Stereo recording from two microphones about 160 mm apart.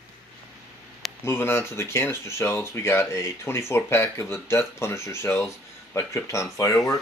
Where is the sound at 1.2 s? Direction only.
15° left (ahead or behind).